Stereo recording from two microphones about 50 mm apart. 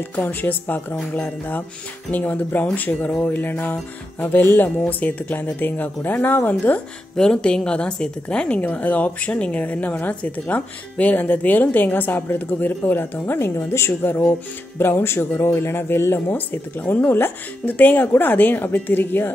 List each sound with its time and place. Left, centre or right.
0.1 s a woman's voice: left
7.2 s a woman's voice: centre
8.5 s a woman's voice: left
14.8 s speech: left
16.3 s a woman's voice: left